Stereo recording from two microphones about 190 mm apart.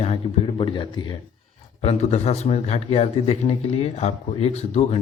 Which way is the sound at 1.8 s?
35° left (ahead or behind).